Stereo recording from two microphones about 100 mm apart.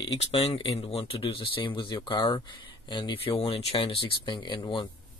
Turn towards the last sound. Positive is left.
turn(degrees=55)  # may be behind; listen again after turning